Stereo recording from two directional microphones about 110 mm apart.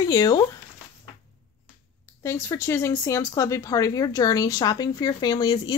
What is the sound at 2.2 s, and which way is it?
Speech, 25° left (ahead or behind).